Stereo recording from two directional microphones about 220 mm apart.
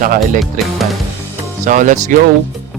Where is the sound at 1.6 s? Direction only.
35° right (ahead or behind).